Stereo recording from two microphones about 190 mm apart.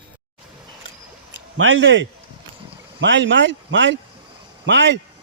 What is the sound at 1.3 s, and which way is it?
Speech, 85° right.